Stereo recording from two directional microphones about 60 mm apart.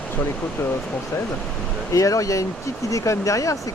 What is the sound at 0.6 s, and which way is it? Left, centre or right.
Speech, left.